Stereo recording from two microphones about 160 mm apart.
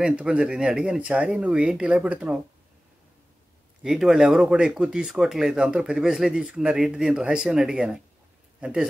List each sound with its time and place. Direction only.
0.0 s speech: 5° right (ahead or behind)
3.8 s speech: centre (ahead or behind)